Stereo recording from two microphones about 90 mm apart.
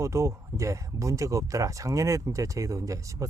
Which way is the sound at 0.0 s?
30° right (ahead or behind).